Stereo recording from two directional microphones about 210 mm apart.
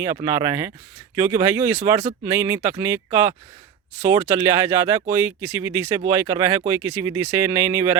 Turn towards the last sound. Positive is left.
turn(degrees=-10)  # may be behind; listen again after turning